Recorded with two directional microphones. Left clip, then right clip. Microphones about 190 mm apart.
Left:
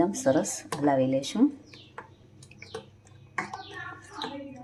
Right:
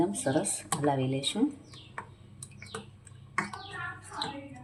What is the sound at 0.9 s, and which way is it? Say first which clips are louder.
Speech: left 6 dB; 25° left (ahead or behind).